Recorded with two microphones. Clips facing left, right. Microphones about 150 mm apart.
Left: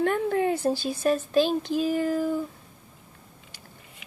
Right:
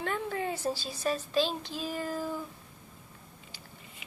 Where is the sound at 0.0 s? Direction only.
55° left (ahead or behind).